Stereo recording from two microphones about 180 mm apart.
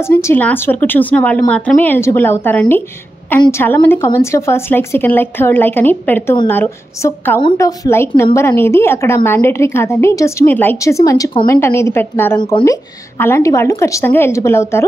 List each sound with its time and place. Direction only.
0.0 s a woman's voice: 15° left (ahead or behind)